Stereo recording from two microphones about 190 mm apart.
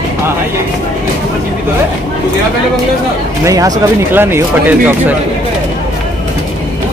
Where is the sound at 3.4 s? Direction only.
15° right (ahead or behind).